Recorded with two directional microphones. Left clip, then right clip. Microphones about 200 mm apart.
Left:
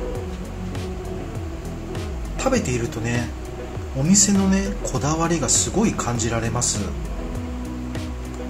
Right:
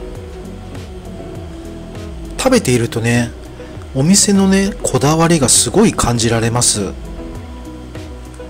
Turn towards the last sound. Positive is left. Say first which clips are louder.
# right 9 dB
turn(degrees=-45)  # may be behind; listen again after turning